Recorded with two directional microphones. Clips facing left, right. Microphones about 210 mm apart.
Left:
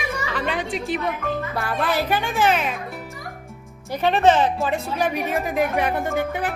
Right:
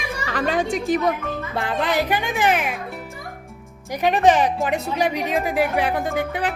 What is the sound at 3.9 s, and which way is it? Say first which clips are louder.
A woman's voice: even; 15° right (ahead or behind).